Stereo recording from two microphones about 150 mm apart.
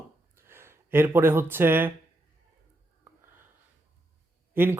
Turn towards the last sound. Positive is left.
turn(degrees=-15)  # may be behind; listen again after turning